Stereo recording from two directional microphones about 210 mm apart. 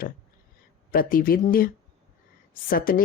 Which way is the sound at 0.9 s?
40° left (ahead or behind).